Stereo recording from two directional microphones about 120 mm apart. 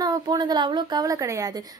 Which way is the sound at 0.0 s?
30° right (ahead or behind).